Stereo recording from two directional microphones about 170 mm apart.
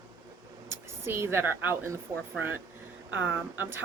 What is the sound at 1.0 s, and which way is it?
Speech, 15° right (ahead or behind).